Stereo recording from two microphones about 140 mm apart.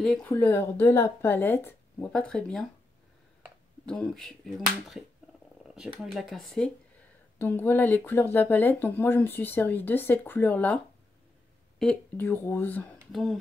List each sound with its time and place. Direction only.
0.0 s speech: 5° left (ahead or behind)
0.3 s speech: 15° left (ahead or behind)
3.8 s speech: 5° left (ahead or behind)
11.8 s speech: 10° left (ahead or behind)
13.1 s speech: centre (ahead or behind)